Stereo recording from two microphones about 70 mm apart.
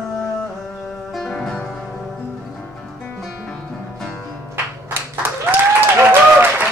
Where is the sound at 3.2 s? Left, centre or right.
Centre.